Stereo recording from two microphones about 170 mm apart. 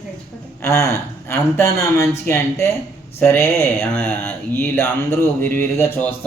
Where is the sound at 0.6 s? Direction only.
15° left (ahead or behind).